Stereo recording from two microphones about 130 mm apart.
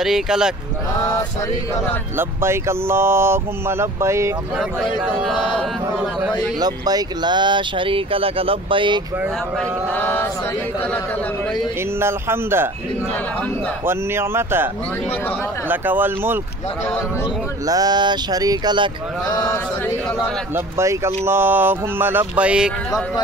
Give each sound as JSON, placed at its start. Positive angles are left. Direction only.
{"t": 0.0, "sound": "a sound", "side_deg": -5}
{"t": 2.1, "sound": "speech", "side_deg": -20}
{"t": 5.0, "sound": "a sound", "side_deg": 0}
{"t": 6.6, "sound": "speech", "side_deg": -30}
{"t": 9.6, "sound": "speech", "side_deg": 10}
{"t": 12.0, "sound": "speech", "side_deg": -20}
{"t": 13.8, "sound": "speech", "side_deg": -20}
{"t": 15.7, "sound": "speech", "side_deg": -15}
{"t": 17.6, "sound": "speech", "side_deg": -30}
{"t": 19.2, "sound": "a sound", "side_deg": 30}
{"t": 20.5, "sound": "speech", "side_deg": -20}